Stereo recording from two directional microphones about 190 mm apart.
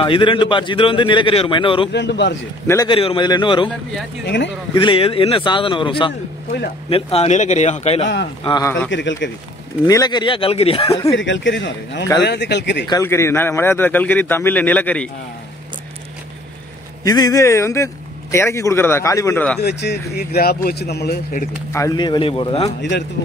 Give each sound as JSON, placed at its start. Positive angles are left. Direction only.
{"t": 0.0, "sound": "speech", "side_deg": 25}
{"t": 1.9, "sound": "a man's voice", "side_deg": 65}
{"t": 2.6, "sound": "a man's voice", "side_deg": 15}
{"t": 2.9, "sound": "speech", "side_deg": 25}
{"t": 4.7, "sound": "speech", "side_deg": 30}
{"t": 8.5, "sound": "speech", "side_deg": 20}
{"t": 8.9, "sound": "speech", "side_deg": 75}
{"t": 9.8, "sound": "speech", "side_deg": 20}
{"t": 11.1, "sound": "a man's voice", "side_deg": 70}
{"t": 12.8, "sound": "a man's voice", "side_deg": 15}
{"t": 17.0, "sound": "a man's voice", "side_deg": 20}
{"t": 19.6, "sound": "a man's voice", "side_deg": 60}
{"t": 21.7, "sound": "speech", "side_deg": 20}
{"t": 22.8, "sound": "a man's voice", "side_deg": 65}